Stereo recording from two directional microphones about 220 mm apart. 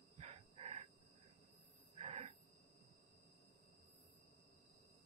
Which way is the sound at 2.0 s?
30° right (ahead or behind).